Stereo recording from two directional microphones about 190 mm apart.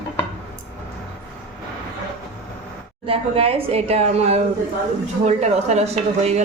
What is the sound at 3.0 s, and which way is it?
A woman's voice, 30° right (ahead or behind).